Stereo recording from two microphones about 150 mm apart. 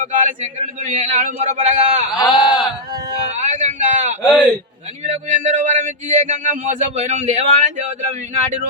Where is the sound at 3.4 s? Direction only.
50° right (ahead or behind).